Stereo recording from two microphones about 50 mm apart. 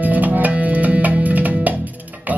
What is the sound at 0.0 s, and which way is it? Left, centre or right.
Music, right.